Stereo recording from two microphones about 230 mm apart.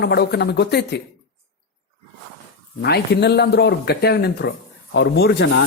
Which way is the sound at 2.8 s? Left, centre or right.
Left.